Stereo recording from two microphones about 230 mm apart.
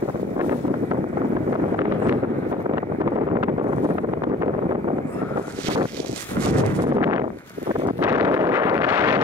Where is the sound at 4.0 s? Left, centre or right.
Centre.